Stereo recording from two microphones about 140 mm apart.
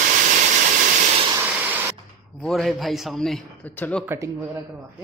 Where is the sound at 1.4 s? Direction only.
10° right (ahead or behind).